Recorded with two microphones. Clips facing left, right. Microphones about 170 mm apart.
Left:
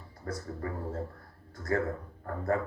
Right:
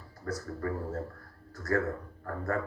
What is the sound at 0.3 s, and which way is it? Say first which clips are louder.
Speech: right 2 dB; 25° left (ahead or behind).